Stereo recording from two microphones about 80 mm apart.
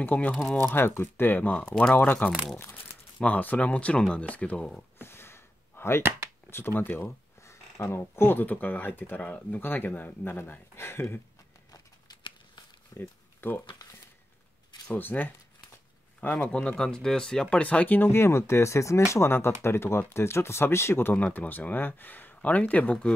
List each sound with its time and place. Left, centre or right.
0.0 s speech: left
5.0 s a sound: left
6.5 s speech: left
7.4 s speech: left
12.2 s crumpling: left
12.9 s a sound: left
14.9 s speech: left
16.3 s speech: centre